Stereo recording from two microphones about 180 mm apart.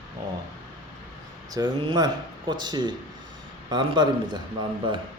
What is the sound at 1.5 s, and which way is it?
Speech, 25° right (ahead or behind).